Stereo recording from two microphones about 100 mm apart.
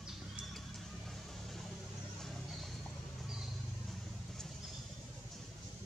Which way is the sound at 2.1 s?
5° left (ahead or behind).